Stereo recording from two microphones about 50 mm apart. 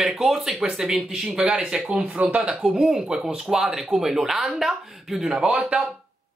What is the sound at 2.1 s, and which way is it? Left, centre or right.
Speech, right.